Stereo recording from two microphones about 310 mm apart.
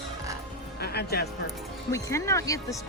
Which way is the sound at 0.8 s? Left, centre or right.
Left.